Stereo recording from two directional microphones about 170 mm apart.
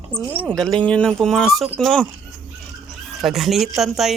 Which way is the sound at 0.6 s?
5° left (ahead or behind).